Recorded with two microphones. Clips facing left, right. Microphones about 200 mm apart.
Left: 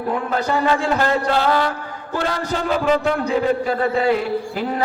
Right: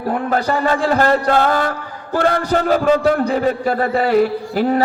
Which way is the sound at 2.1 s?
55° right (ahead or behind).